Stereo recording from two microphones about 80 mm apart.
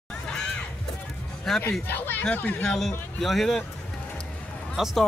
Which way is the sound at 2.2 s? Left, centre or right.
Centre.